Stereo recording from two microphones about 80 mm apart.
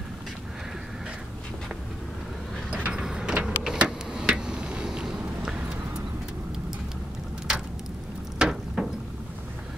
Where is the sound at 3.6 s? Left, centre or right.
Centre.